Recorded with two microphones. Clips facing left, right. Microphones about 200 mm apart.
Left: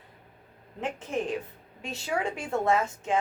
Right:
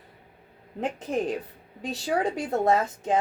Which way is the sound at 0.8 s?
40° right (ahead or behind).